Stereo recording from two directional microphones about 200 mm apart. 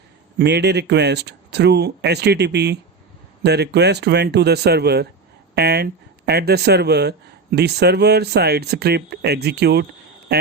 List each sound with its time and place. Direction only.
0.3 s speech: 55° right (ahead or behind)